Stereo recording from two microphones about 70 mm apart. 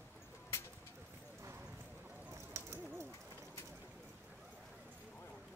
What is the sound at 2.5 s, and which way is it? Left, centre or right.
Bird, right.